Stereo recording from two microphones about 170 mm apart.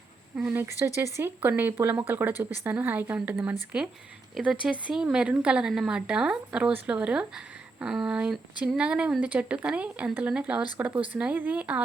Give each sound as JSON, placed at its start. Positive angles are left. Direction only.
{"t": 0.3, "sound": "a woman's voice", "side_deg": -10}